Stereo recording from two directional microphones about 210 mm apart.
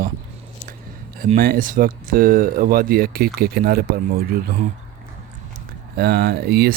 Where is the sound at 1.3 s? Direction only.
40° right (ahead or behind).